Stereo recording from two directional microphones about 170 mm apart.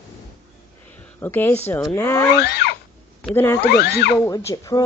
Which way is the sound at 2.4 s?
70° left (ahead or behind).